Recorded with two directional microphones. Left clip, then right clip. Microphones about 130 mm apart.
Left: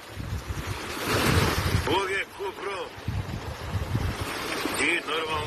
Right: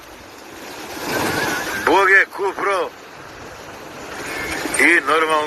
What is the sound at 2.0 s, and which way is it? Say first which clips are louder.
Speech: right 17 dB; 55° right (ahead or behind).